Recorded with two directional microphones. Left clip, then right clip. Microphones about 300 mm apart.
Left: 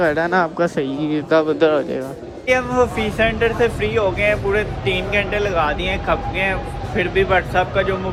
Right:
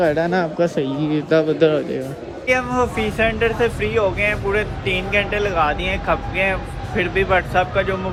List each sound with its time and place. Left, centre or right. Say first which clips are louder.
0.0 s speech: left 1 dB; centre